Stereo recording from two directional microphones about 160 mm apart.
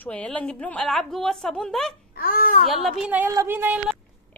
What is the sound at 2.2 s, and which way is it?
Speech, 65° left (ahead or behind).